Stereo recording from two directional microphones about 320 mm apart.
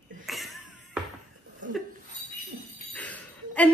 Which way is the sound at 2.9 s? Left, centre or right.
Centre.